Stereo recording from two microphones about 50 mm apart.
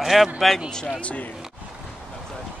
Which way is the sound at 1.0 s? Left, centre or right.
Left.